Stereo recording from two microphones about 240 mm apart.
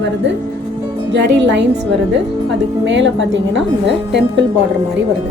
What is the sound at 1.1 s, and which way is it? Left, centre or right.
A woman's voice, right.